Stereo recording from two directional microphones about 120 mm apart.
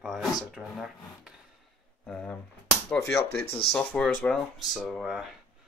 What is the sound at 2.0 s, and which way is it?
Speech, 10° left (ahead or behind).